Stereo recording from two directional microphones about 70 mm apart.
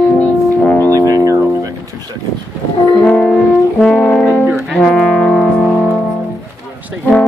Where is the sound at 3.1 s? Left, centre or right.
Centre.